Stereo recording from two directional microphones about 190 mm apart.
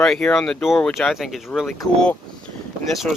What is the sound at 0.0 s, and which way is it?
Speech, 5° left (ahead or behind).